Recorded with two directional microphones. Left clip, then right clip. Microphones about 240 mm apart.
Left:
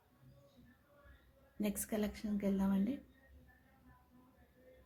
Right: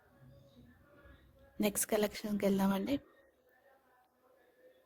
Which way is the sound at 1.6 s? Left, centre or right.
Right.